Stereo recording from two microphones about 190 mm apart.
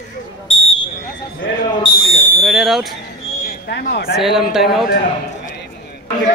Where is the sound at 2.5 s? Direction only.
Centre (ahead or behind).